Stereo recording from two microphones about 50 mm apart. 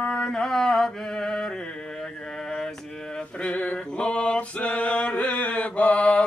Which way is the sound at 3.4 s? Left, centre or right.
Left.